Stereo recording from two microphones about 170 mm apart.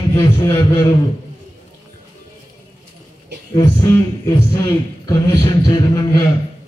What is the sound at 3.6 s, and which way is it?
A man's voice, 20° left (ahead or behind).